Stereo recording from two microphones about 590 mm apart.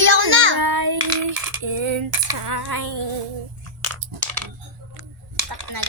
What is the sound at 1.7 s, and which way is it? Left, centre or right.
Speech, right.